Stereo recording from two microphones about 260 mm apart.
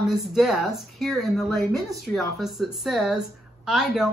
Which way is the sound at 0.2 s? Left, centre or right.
Centre.